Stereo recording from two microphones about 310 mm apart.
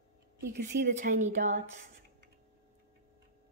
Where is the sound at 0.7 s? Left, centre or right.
Right.